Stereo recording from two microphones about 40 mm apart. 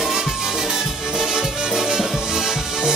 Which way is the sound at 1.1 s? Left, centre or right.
Centre.